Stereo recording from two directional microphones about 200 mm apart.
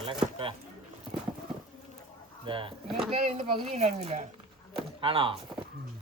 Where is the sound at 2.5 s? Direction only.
25° right (ahead or behind).